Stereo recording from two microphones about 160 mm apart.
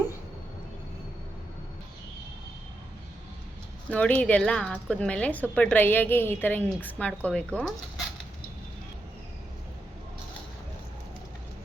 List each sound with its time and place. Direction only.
3.8 s a woman's voice: 10° left (ahead or behind)